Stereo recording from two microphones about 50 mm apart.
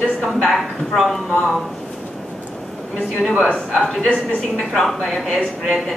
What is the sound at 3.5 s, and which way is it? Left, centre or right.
Speech, centre.